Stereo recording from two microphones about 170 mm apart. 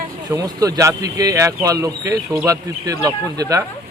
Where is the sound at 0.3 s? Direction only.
20° right (ahead or behind).